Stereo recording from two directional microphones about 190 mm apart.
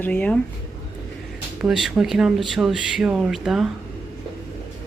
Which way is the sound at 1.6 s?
Centre (ahead or behind).